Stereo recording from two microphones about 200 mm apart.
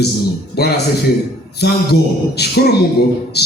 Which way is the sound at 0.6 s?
55° left (ahead or behind).